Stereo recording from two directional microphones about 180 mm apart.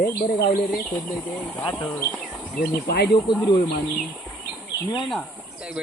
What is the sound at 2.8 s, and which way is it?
Speech, 60° left (ahead or behind).